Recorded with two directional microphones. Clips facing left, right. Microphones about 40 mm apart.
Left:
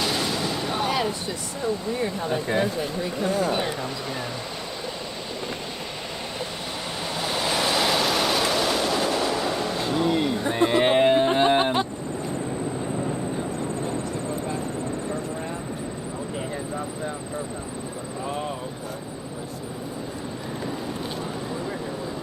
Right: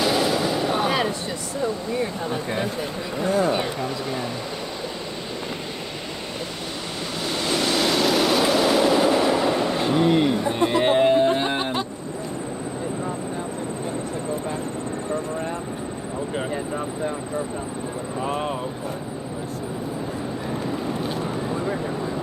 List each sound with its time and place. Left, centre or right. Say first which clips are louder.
0.0 s gunshot: right 5 dB; centre
3.8 s speech: right 3 dB; centre
7.0 s waves: even; centre; by 10.3 s right
10.5 s music: left 3 dB; left